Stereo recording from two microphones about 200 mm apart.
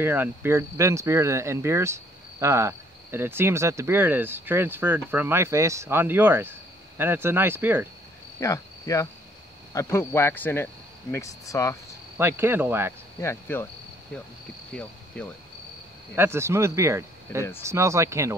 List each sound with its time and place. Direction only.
0.0 s speech: 10° right (ahead or behind)
8.4 s cricket: 15° left (ahead or behind)
9.8 s speech: 10° left (ahead or behind)
12.2 s speech: 10° right (ahead or behind)
13.2 s speech: 10° left (ahead or behind)
16.2 s speech: 15° right (ahead or behind)